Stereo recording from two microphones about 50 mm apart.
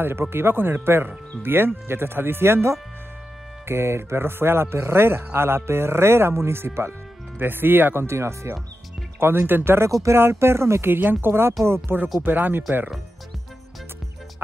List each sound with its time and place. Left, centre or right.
0.0 s speech: right
7.3 s speech: right
9.2 s speech: right
10.9 s speech: right